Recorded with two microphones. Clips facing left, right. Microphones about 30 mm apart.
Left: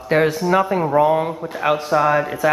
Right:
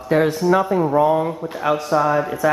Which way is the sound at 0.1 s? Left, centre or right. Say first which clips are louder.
Left 1 dB; left.